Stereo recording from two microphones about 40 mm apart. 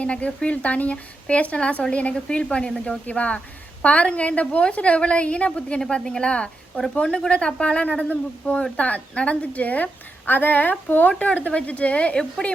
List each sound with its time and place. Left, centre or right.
0.0 s a woman's voice: left
3.1 s a woman's voice: left
11.1 s a woman's voice: left